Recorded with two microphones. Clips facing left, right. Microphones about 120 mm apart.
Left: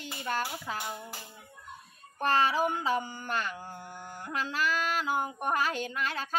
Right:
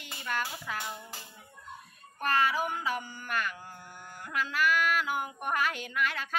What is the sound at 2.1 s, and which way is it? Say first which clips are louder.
A child's voice: left 2 dB; 30° left (ahead or behind).